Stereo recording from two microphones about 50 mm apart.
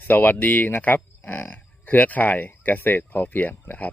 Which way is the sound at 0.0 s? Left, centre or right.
Left.